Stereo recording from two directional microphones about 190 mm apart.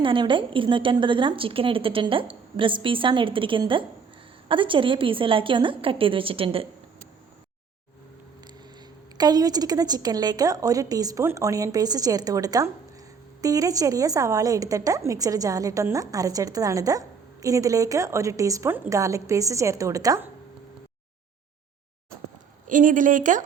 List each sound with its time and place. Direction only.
0.0 s a woman's voice: 25° right (ahead or behind)
9.1 s a woman's voice: 20° right (ahead or behind)
22.6 s speech: 45° right (ahead or behind)